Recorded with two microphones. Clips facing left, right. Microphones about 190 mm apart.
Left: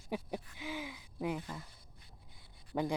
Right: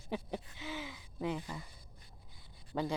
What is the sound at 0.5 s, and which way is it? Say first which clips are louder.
Gasp: left 1 dB; 10° left (ahead or behind).